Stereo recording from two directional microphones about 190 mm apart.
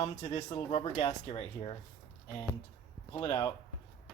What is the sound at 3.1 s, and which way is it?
Speech, 25° left (ahead or behind).